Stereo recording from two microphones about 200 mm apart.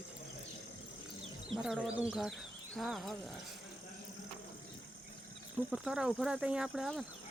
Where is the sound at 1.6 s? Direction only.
5° right (ahead or behind).